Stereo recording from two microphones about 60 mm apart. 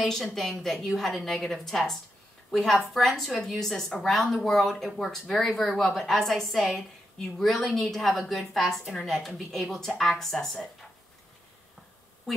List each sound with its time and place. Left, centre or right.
0.0 s a woman's voice: centre